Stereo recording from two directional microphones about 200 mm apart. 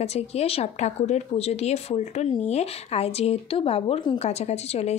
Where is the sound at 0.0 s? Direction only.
30° left (ahead or behind).